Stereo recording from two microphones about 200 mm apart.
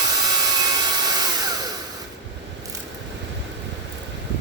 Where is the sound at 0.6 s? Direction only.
20° right (ahead or behind).